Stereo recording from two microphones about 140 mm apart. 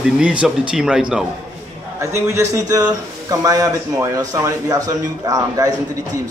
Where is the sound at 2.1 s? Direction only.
20° right (ahead or behind).